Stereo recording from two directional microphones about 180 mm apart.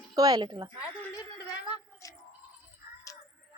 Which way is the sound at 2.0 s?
20° left (ahead or behind).